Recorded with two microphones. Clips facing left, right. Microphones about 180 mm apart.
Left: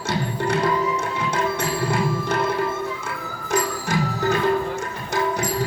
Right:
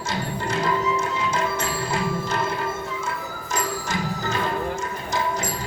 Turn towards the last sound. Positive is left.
turn(degrees=60)  # may be behind; listen again after turning